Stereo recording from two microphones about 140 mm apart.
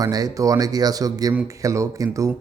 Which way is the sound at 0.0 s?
25° right (ahead or behind).